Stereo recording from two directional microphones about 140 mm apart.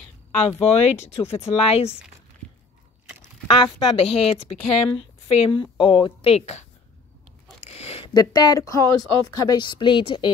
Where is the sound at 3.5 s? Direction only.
35° left (ahead or behind).